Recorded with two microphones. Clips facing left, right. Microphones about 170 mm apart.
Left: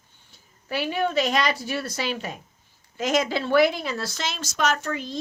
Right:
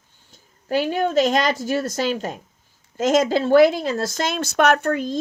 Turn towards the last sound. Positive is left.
turn(degrees=-50)  # may be behind; listen again after turning